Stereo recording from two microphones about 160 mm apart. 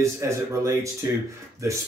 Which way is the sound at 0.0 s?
20° right (ahead or behind).